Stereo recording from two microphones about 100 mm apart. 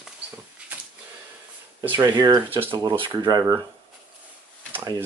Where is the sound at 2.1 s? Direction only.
45° right (ahead or behind).